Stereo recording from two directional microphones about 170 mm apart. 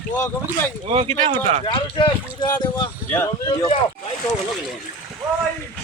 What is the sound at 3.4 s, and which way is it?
Speech, 25° left (ahead or behind).